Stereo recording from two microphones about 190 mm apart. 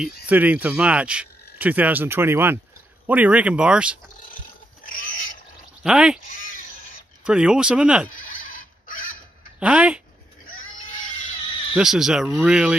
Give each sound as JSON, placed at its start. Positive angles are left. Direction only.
{"t": 0.3, "sound": "speech", "side_deg": -10}
{"t": 4.8, "sound": "pig", "side_deg": 45}
{"t": 5.9, "sound": "speech", "side_deg": -5}
{"t": 6.2, "sound": "a sound", "side_deg": 45}
{"t": 7.2, "sound": "speech", "side_deg": -5}
{"t": 8.1, "sound": "a sound", "side_deg": 45}
{"t": 9.6, "sound": "speech", "side_deg": -5}
{"t": 10.5, "sound": "a sound", "side_deg": 40}
{"t": 11.7, "sound": "speech", "side_deg": -5}